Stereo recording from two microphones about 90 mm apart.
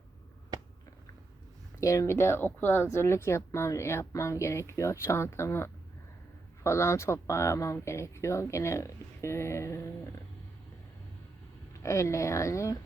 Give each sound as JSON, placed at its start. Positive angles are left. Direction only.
{"t": 1.8, "sound": "speech", "side_deg": 35}
{"t": 11.8, "sound": "speech", "side_deg": 35}